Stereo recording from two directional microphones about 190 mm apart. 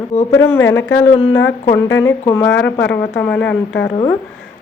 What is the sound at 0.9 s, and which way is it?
Speech, 90° left.